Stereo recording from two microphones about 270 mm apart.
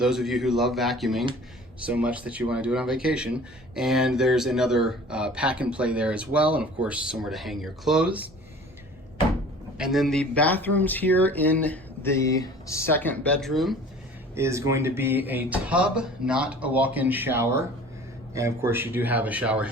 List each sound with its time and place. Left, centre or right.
0.0 s speech: centre
9.7 s speech: centre
14.3 s speech: centre